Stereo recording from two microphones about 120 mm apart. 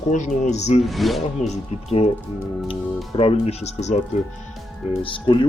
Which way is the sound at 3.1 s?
55° left (ahead or behind).